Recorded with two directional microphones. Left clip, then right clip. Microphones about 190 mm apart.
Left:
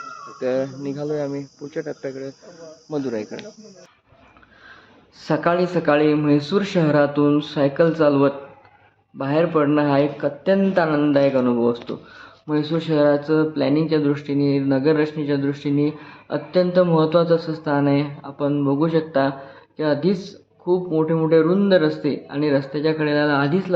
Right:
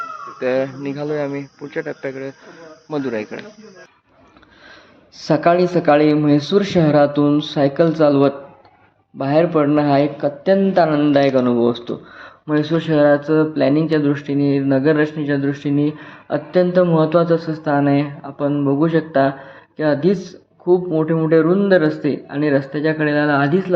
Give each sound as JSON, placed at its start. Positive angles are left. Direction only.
{"t": 0.3, "sound": "a man's voice", "side_deg": -10}
{"t": 5.1, "sound": "a man's voice", "side_deg": -15}